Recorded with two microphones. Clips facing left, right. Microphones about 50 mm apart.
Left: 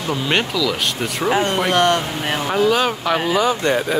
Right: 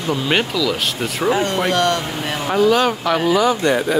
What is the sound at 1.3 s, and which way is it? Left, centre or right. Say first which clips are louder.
Speech: even; left.